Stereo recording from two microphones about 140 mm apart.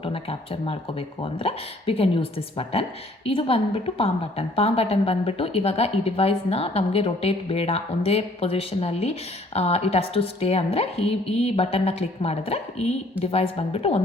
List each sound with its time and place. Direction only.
0.0 s a woman's voice: 40° left (ahead or behind)